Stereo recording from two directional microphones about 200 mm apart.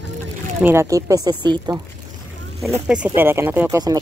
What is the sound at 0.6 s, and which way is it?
Speech, 10° right (ahead or behind).